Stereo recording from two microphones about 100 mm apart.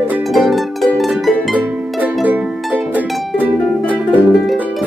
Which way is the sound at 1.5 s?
15° right (ahead or behind).